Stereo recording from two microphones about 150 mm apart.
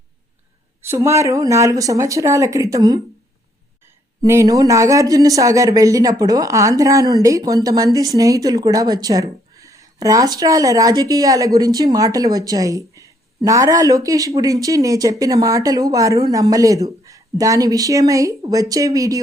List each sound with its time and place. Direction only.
0.8 s a woman's voice: 15° right (ahead or behind)